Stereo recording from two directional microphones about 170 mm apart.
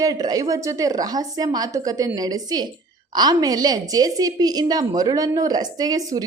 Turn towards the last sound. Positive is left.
turn(degrees=-20)  # may be behind; listen again after turning